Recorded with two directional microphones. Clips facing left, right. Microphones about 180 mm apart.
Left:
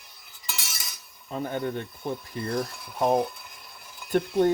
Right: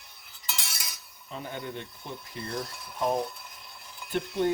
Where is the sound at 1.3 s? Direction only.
50° left (ahead or behind).